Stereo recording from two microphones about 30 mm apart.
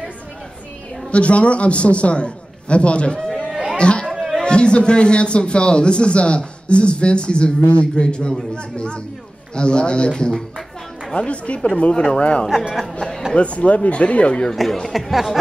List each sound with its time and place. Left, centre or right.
1.1 s a man's voice: left
3.3 s a sound: centre
3.7 s a man's voice: left
11.1 s speech: left
11.9 s speech: left
12.2 s a man's voice: left
14.5 s speech: centre